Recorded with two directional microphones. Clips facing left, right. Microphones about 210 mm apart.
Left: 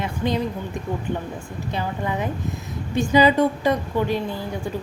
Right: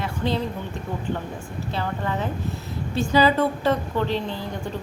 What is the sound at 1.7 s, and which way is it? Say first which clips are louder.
A woman's voice: left 1 dB; 15° left (ahead or behind).